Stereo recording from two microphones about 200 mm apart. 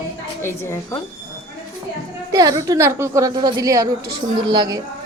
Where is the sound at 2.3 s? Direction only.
20° right (ahead or behind).